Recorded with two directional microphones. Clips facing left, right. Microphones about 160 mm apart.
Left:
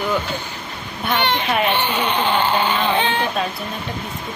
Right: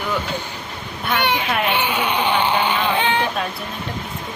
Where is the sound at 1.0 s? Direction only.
10° right (ahead or behind).